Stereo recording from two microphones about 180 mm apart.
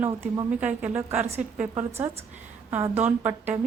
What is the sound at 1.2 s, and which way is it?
Speech, 35° right (ahead or behind).